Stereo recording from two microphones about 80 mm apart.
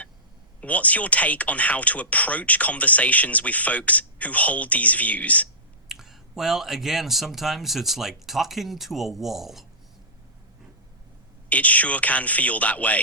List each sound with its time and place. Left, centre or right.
0.6 s speech: centre
5.9 s speech: centre
11.4 s speech: centre